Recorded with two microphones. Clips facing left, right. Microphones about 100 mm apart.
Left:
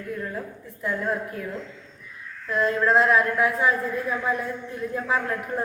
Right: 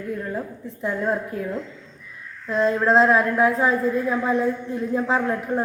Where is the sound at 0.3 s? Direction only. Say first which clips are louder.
Right 4 dB; 25° right (ahead or behind).